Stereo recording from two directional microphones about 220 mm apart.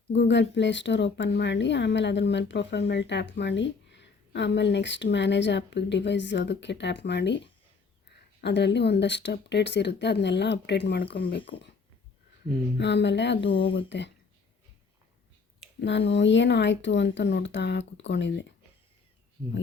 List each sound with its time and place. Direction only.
0.1 s speech: 55° left (ahead or behind)
8.4 s speech: 50° left (ahead or behind)
12.7 s speech: 50° left (ahead or behind)
13.4 s speech: 25° left (ahead or behind)
13.7 s speech: 55° left (ahead or behind)
15.8 s speech: 55° left (ahead or behind)